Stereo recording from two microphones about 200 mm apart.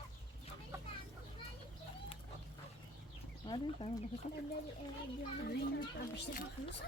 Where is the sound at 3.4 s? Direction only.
25° left (ahead or behind).